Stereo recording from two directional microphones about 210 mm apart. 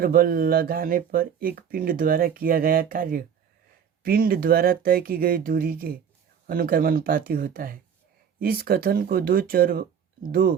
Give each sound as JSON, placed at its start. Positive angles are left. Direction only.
{"t": 0.0, "sound": "speech", "side_deg": -45}